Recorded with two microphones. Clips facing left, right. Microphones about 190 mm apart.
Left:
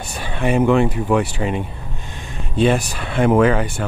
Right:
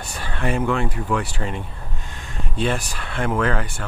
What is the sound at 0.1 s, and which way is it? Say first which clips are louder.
Speech: left 5 dB; 20° left (ahead or behind).